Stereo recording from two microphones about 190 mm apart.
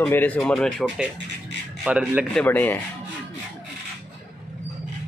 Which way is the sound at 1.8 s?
10° right (ahead or behind).